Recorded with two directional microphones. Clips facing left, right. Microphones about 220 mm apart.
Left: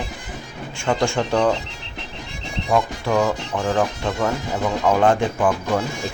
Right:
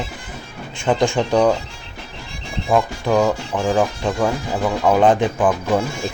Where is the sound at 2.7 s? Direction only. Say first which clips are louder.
Right 3 dB; 15° right (ahead or behind).